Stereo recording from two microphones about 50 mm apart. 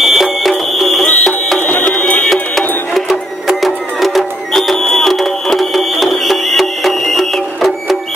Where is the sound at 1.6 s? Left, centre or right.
Left.